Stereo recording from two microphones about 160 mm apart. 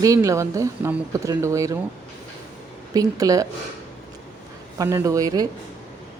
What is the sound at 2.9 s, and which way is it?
Speech, 20° right (ahead or behind).